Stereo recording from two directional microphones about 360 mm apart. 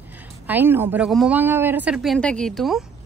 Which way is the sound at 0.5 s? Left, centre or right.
Centre.